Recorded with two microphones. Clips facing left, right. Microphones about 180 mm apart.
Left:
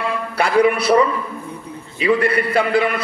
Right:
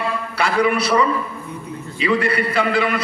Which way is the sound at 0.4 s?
55° left (ahead or behind).